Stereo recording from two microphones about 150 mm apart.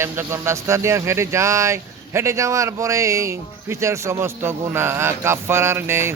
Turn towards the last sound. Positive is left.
turn(degrees=-15)  # may be behind; listen again after turning